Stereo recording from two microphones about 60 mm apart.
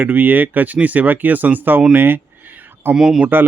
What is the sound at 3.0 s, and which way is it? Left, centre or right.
Speech, centre.